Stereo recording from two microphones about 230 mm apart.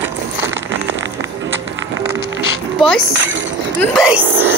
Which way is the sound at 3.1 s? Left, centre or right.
Right.